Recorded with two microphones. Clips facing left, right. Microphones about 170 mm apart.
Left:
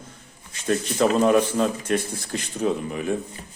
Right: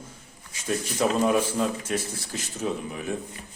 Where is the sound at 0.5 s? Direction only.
10° right (ahead or behind).